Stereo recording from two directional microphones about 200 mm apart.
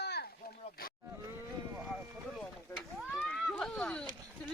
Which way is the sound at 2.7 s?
5° left (ahead or behind).